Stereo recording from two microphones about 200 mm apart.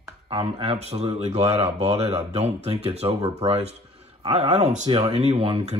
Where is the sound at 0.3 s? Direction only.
30° right (ahead or behind).